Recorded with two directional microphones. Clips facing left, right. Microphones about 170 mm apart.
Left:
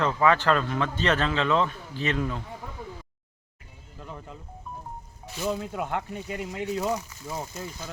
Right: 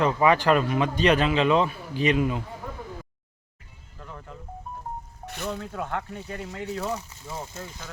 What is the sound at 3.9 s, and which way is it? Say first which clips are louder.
Music: left 1 dB; 20° left (ahead or behind).